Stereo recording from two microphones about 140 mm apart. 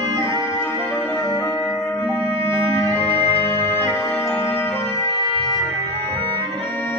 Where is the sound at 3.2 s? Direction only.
35° right (ahead or behind).